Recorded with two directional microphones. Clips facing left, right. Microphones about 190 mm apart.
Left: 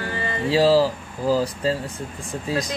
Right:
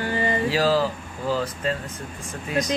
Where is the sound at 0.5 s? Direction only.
30° left (ahead or behind).